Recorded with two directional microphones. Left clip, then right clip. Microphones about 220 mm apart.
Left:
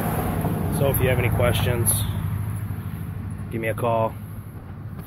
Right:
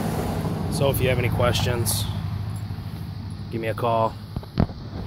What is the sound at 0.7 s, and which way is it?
Speech, 5° right (ahead or behind).